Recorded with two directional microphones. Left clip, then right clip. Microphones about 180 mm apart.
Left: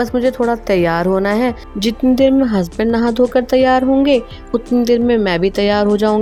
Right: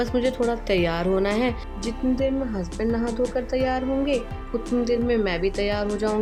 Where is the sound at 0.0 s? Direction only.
30° left (ahead or behind).